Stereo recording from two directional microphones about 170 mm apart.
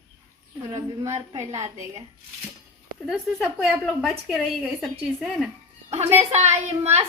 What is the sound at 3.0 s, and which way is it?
A woman's voice, 5° right (ahead or behind).